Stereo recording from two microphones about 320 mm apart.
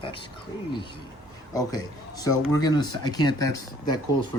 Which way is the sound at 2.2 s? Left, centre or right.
Centre.